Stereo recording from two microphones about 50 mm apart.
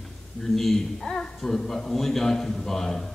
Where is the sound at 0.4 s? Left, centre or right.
Centre.